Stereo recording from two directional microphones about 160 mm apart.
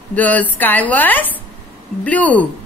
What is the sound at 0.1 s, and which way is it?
A woman's voice, 10° left (ahead or behind).